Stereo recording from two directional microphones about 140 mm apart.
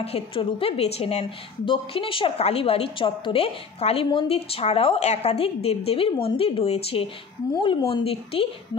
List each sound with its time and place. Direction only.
0.0 s a woman's voice: 45° left (ahead or behind)